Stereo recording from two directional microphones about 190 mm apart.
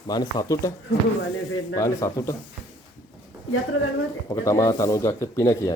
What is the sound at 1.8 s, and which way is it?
Speech, 15° left (ahead or behind).